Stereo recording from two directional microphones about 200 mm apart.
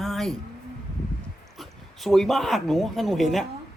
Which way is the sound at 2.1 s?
Centre (ahead or behind).